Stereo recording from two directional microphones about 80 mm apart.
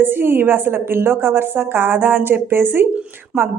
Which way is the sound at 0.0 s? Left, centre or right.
Right.